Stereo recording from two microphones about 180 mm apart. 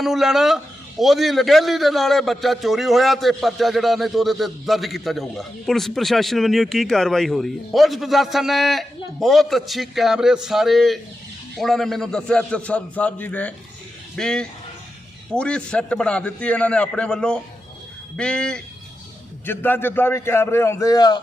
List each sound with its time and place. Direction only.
0.0 s a man's voice: centre (ahead or behind); by 21.2 s 20° left (ahead or behind)